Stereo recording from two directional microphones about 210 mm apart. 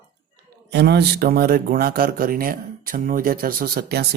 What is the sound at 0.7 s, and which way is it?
Speech, 50° right (ahead or behind).